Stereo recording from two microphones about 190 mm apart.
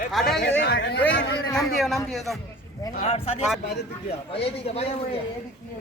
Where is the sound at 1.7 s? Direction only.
Centre (ahead or behind).